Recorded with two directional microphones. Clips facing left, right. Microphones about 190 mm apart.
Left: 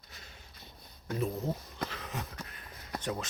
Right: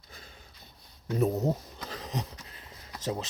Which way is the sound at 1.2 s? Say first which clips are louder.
Right 7 dB; 40° right (ahead or behind).